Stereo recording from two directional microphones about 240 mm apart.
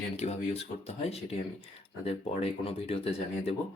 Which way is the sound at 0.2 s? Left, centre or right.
Left.